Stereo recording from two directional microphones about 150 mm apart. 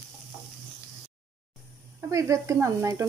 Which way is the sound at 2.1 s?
20° right (ahead or behind).